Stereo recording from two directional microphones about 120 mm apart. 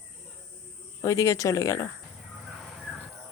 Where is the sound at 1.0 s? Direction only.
25° left (ahead or behind).